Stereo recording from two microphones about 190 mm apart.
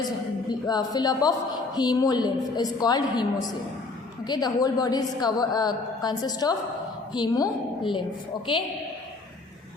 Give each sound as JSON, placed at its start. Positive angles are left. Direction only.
{"t": 0.7, "sound": "a woman's voice", "side_deg": 20}